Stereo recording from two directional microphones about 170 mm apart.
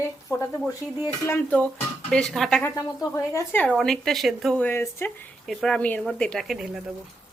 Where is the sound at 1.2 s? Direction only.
10° left (ahead or behind).